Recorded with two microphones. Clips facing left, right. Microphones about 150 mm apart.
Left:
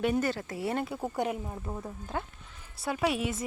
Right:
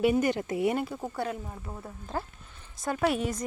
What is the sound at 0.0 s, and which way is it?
Speech, 10° right (ahead or behind).